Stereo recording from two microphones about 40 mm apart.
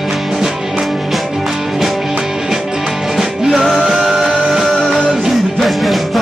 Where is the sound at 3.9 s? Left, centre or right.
Centre.